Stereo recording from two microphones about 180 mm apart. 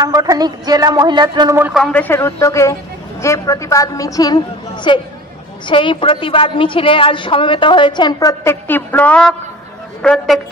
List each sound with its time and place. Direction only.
0.0 s speech: 20° right (ahead or behind)
1.6 s a man's voice: centre (ahead or behind)